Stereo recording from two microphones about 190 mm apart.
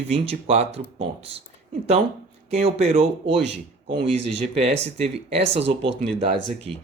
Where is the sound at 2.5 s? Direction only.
35° right (ahead or behind).